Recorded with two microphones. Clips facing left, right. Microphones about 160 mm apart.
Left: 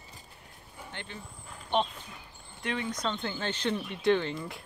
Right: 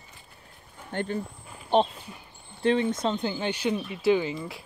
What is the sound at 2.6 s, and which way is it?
Speech, 30° right (ahead or behind).